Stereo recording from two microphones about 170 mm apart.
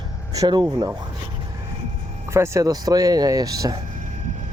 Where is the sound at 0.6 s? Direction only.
15° right (ahead or behind).